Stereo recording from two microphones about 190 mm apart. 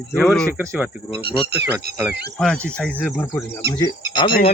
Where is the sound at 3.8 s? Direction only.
25° left (ahead or behind).